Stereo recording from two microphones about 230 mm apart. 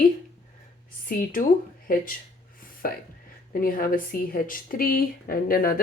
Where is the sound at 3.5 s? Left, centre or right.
Left.